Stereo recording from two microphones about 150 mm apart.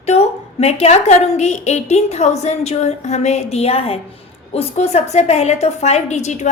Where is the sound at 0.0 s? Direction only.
45° left (ahead or behind).